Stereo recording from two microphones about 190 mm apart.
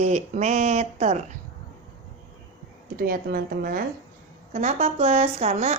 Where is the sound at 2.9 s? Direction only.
50° right (ahead or behind).